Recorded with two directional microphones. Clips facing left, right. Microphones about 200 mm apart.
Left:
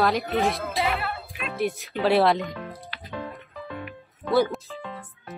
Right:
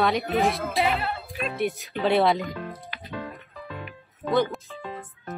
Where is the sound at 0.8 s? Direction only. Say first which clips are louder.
Even; 15° right (ahead or behind).